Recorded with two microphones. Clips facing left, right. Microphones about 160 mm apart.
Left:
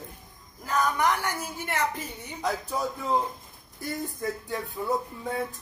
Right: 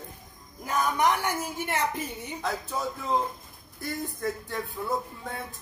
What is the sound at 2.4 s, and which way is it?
Speech, 15° left (ahead or behind).